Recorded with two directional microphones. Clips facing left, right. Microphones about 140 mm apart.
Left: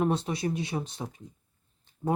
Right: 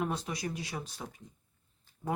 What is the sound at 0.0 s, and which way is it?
Speech, 25° left (ahead or behind).